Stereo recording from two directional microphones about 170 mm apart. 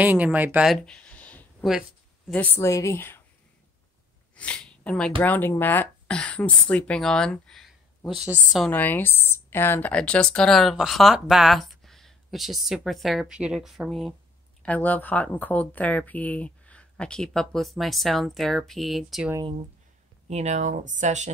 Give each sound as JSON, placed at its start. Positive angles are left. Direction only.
{"t": 0.0, "sound": "speech", "side_deg": -10}
{"t": 0.8, "sound": "a sound", "side_deg": 5}
{"t": 1.7, "sound": "a sound", "side_deg": 0}
{"t": 2.3, "sound": "a woman's voice", "side_deg": 10}
{"t": 4.4, "sound": "a woman's voice", "side_deg": 5}
{"t": 20.2, "sound": "speech", "side_deg": -40}